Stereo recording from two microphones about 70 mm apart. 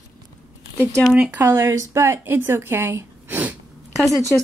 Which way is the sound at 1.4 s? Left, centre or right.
Right.